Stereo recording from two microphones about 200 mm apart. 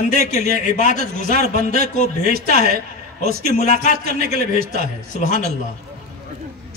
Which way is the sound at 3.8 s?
35° left (ahead or behind).